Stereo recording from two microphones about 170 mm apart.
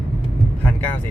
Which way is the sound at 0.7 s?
10° left (ahead or behind).